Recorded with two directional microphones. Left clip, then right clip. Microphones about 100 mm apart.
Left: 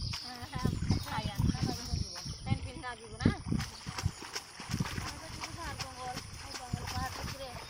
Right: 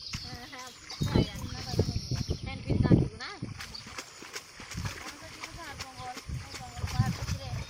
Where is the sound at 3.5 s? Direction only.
25° left (ahead or behind).